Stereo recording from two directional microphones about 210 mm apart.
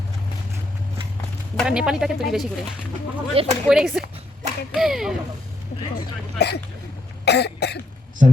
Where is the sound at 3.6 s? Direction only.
Centre (ahead or behind).